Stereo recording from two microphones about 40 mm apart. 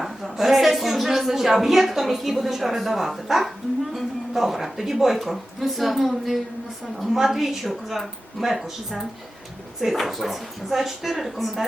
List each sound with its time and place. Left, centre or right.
0.0 s a woman's voice: centre